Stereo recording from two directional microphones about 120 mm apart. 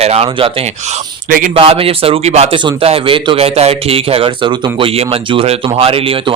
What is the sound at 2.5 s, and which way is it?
A man's voice, 50° right (ahead or behind).